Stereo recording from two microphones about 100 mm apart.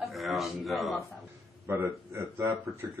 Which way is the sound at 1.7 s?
25° right (ahead or behind).